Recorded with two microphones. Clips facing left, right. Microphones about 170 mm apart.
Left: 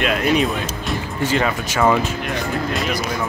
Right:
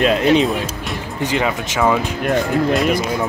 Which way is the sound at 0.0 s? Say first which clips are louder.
Right 4 dB; 30° right (ahead or behind).